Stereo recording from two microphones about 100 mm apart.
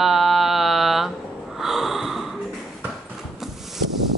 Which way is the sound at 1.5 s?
5° right (ahead or behind).